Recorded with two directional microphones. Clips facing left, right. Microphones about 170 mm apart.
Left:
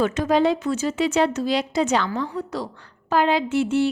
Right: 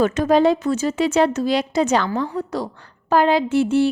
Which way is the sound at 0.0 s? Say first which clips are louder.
Right 4 dB; 45° right (ahead or behind).